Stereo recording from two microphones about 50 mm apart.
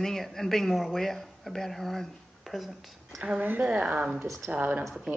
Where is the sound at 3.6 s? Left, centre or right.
Right.